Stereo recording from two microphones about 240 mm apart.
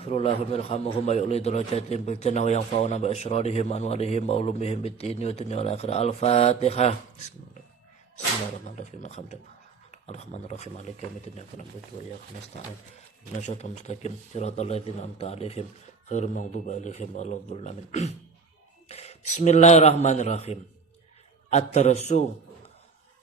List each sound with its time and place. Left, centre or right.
0.0 s a man's voice: left
8.6 s a man's voice: left
13.4 s a man's voice: left